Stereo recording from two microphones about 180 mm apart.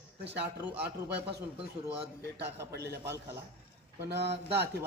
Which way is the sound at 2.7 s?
65° right (ahead or behind).